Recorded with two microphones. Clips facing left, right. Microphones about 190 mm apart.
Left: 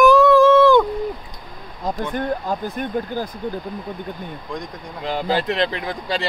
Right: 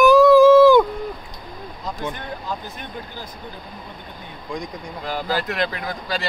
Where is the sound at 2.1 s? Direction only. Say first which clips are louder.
Left 8 dB; 50° left (ahead or behind).